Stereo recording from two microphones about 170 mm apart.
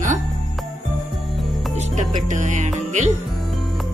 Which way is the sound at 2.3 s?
45° right (ahead or behind).